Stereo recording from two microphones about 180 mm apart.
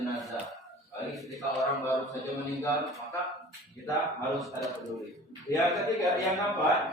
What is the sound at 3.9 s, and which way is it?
Speech, 20° left (ahead or behind).